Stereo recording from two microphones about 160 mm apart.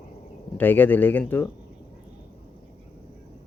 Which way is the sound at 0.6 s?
10° left (ahead or behind).